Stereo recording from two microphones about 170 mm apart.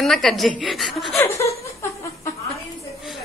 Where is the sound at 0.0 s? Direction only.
Centre (ahead or behind).